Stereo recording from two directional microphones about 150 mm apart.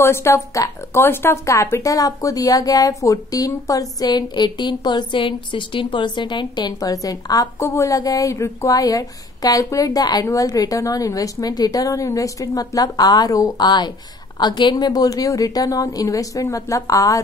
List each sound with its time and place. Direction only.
0.0 s speech: 15° left (ahead or behind)